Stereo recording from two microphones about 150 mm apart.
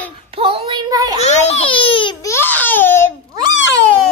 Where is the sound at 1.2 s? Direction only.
45° left (ahead or behind).